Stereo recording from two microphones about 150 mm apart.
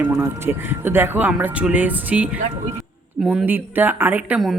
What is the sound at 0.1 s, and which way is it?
Speech, 20° right (ahead or behind).